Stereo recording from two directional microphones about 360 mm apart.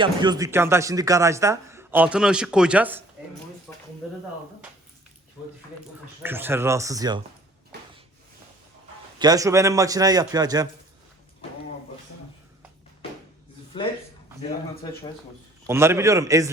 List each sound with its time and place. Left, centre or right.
0.0 s speech: centre
6.2 s speech: centre
7.7 s a sound: right
9.1 s speech: centre
15.6 s speech: centre